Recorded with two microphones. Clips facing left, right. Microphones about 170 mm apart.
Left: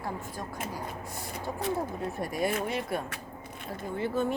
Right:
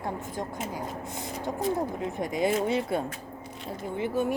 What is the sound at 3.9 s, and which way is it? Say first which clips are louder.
Speech: right 2 dB; 15° right (ahead or behind).